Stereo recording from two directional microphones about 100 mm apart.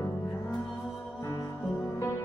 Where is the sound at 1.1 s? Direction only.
30° left (ahead or behind).